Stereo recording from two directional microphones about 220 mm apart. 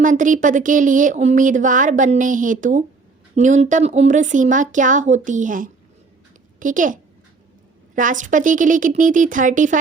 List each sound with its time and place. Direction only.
0.0 s speech: 35° right (ahead or behind)